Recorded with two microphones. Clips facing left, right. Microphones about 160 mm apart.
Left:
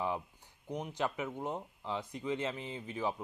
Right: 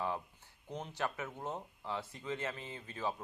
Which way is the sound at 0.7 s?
15° left (ahead or behind).